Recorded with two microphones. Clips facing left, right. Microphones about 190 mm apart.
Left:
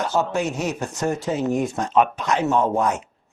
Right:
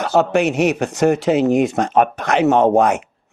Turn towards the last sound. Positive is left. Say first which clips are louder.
# right 7 dB
turn(degrees=-70)  # may be behind; listen again after turning